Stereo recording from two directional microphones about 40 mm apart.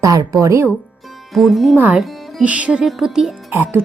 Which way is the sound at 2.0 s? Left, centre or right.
Centre.